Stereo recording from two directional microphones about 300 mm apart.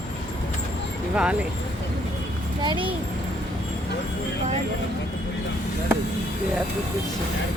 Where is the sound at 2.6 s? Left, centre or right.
Centre.